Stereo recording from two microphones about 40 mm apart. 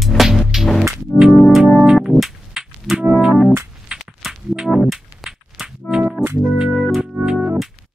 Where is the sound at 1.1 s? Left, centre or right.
Left.